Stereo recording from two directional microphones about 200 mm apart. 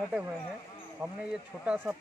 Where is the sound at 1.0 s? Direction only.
5° right (ahead or behind).